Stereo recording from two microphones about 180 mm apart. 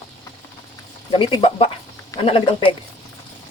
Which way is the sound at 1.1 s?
30° left (ahead or behind).